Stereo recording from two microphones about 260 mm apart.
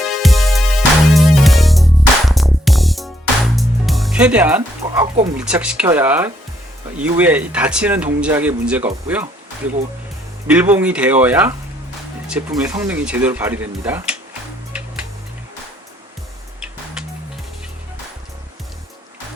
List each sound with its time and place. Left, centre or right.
0.2 s music: centre
5.2 s speech: centre
10.4 s speech: centre